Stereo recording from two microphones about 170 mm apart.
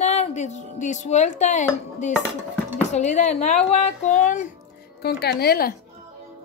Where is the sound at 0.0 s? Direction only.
40° left (ahead or behind).